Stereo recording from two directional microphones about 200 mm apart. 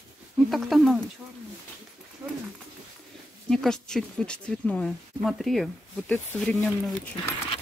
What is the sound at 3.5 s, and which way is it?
A woman's voice, 5° left (ahead or behind).